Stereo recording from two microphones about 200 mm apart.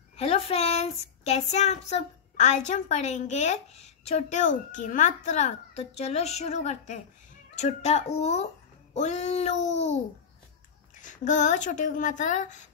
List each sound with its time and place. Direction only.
0.2 s speech: 30° left (ahead or behind)
11.0 s speech: 40° left (ahead or behind)